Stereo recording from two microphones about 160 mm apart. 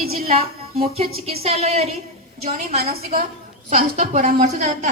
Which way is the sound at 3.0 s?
65° right (ahead or behind).